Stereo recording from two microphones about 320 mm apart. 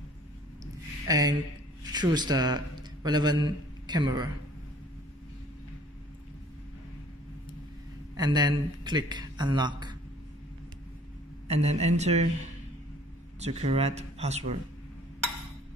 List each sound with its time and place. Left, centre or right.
1.0 s a man's voice: centre
8.2 s speech: centre
11.4 s speech: centre
13.4 s speech: centre